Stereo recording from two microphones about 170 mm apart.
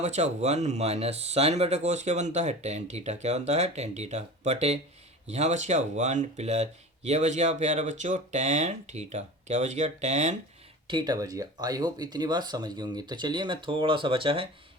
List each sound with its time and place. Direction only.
0.0 s speech: 40° right (ahead or behind)
10.8 s speech: 25° right (ahead or behind)